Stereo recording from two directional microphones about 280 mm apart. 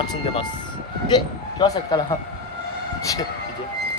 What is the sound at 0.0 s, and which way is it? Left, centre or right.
Speech, centre.